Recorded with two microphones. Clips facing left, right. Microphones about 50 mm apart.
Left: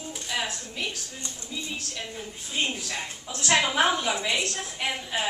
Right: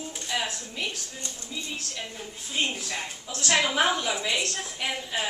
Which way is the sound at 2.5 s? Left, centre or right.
Centre.